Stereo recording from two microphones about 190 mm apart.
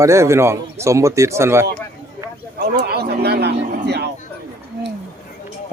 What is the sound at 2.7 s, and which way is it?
Speech, 55° right (ahead or behind).